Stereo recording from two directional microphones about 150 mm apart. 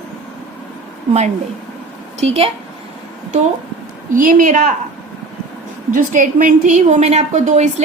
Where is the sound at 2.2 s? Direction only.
45° right (ahead or behind).